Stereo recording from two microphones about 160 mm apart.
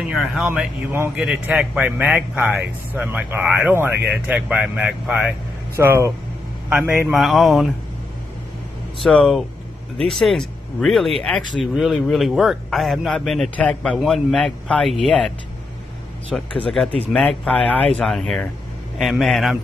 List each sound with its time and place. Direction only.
0.1 s speech: centre (ahead or behind)
9.0 s speech: centre (ahead or behind)